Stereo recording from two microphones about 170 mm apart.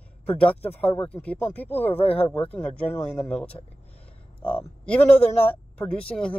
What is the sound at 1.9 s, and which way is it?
Speech, 35° left (ahead or behind).